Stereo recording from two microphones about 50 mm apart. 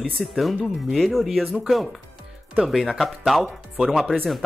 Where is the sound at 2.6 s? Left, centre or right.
Centre.